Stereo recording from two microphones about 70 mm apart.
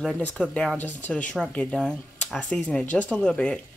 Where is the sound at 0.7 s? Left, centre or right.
Left.